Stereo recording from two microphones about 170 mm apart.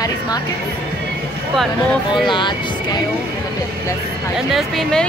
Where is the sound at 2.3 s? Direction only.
25° left (ahead or behind).